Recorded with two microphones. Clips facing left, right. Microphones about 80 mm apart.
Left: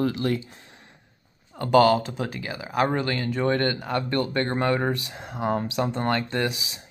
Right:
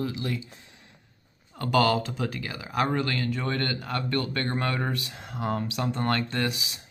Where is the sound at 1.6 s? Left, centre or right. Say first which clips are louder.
Left 5 dB; left.